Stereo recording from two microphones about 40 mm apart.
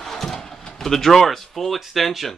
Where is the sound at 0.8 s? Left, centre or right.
Centre.